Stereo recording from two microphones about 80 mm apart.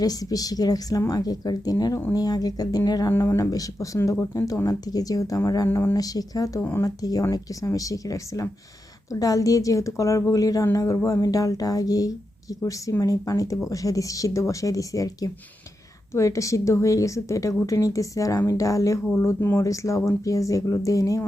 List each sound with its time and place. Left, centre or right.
0.0 s a woman's voice: left
3.1 s a woman's voice: left
5.6 s speech: left
5.9 s a woman's voice: left
6.6 s speech: left
6.8 s a woman's voice: left